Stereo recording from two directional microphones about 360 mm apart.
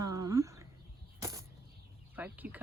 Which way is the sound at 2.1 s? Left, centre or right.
Centre.